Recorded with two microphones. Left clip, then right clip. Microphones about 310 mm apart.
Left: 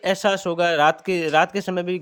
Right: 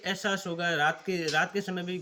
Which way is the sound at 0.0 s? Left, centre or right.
Centre.